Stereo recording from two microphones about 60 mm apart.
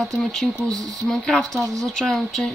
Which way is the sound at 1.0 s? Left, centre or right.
Centre.